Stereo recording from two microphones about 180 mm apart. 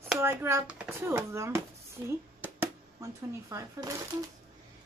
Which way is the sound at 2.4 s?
10° right (ahead or behind).